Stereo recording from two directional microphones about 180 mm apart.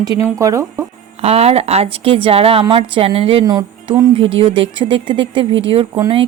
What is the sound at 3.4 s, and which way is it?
Music, 20° right (ahead or behind).